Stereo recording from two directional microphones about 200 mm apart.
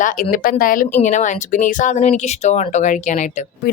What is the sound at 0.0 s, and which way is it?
Speech, 40° left (ahead or behind).